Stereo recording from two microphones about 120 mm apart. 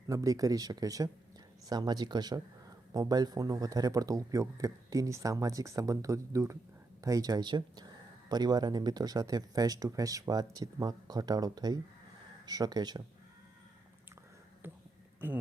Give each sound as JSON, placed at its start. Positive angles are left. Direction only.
{"t": 0.1, "sound": "speech", "side_deg": -30}
{"t": 14.6, "sound": "speech", "side_deg": -20}